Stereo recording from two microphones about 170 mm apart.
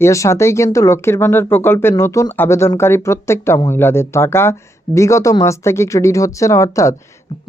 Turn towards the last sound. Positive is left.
turn(degrees=20)  # may be behind; listen again after turning